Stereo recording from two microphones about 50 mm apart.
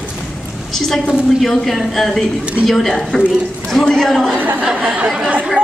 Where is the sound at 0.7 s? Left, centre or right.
Centre.